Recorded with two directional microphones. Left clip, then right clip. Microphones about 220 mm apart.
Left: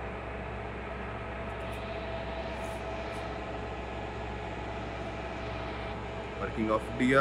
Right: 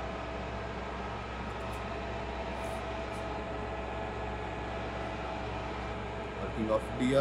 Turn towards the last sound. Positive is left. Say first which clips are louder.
# left 2 dB
turn(degrees=0)  # may be behind; listen again after turning